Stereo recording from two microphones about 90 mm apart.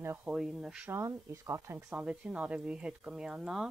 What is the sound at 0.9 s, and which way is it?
Speech, 35° right (ahead or behind).